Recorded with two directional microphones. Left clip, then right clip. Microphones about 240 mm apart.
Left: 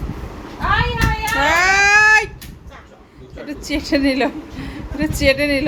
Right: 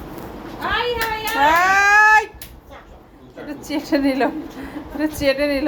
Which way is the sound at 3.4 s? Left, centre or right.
Centre.